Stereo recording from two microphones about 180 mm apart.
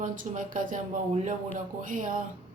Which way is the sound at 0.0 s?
45° right (ahead or behind).